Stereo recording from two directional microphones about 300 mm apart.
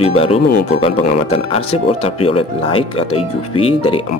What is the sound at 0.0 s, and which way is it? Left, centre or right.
Speech, centre.